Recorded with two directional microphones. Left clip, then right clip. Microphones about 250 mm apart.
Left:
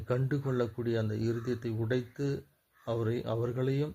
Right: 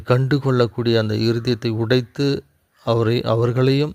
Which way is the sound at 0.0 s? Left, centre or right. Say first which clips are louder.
Right 14 dB; right.